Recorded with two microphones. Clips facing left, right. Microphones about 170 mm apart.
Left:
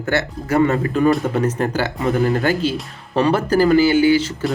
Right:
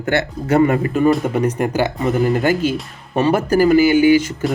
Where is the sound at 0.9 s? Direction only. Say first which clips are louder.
Even; 5° right (ahead or behind).